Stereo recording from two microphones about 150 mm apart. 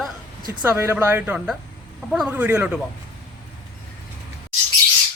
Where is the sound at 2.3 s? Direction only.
15° right (ahead or behind).